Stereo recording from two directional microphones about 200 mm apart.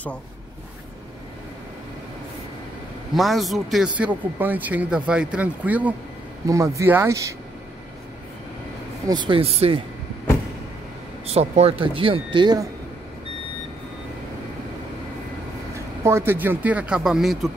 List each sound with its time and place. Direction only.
3.2 s speech: centre (ahead or behind)
9.1 s speech: 25° right (ahead or behind)
11.2 s speech: 30° right (ahead or behind)
15.7 s speech: 15° right (ahead or behind)